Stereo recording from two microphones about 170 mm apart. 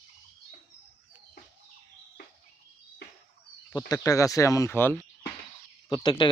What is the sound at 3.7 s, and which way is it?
Speech, 20° left (ahead or behind).